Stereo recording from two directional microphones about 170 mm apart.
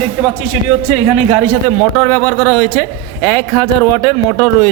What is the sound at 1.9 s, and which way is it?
Speech, 15° left (ahead or behind).